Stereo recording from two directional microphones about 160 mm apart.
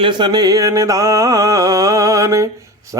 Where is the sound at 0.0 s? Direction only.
30° right (ahead or behind).